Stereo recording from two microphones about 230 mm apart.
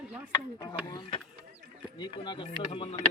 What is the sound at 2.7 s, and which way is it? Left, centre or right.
Speech, left.